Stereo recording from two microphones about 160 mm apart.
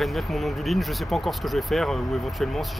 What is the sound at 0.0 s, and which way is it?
Speech, centre (ahead or behind).